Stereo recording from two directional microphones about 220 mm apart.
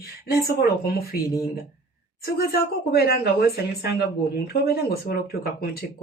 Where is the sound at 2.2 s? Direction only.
45° left (ahead or behind).